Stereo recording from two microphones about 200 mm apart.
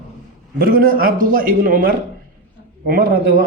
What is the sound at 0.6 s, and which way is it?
Speech, 45° right (ahead or behind).